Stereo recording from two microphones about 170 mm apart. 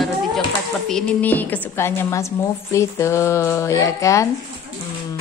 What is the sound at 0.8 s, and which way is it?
A woman's voice, 5° left (ahead or behind).